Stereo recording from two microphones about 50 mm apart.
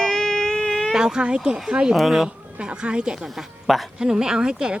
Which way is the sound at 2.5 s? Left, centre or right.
Right.